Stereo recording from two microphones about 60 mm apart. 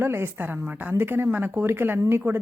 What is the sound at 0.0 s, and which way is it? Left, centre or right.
Speech, right.